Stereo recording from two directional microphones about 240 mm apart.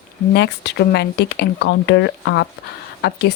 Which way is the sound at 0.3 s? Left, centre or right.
Left.